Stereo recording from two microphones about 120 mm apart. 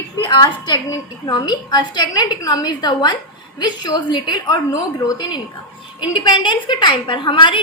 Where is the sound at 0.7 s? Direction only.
35° left (ahead or behind).